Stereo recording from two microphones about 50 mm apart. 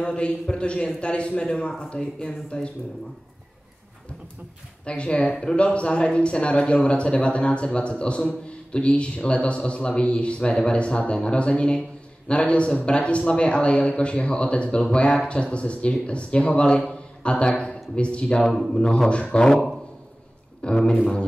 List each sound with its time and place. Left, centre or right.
0.0 s a man's voice: centre
4.8 s a man's voice: left
5.3 s a man's voice: centre
18.4 s speech: centre
18.8 s a man's voice: centre